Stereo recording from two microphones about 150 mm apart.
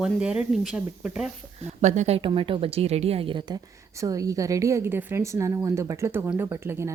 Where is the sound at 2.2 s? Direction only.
35° right (ahead or behind).